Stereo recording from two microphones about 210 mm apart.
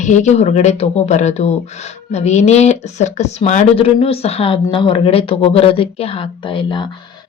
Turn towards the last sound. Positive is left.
turn(degrees=25)  # may be behind; listen again after turning